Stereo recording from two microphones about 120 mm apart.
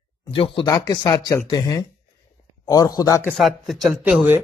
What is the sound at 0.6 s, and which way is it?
Speech, 30° left (ahead or behind).